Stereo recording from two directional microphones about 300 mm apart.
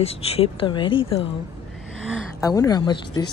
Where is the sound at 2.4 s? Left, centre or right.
Centre.